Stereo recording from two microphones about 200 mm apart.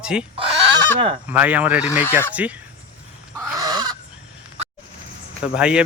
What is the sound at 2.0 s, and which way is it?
Speech, 10° left (ahead or behind).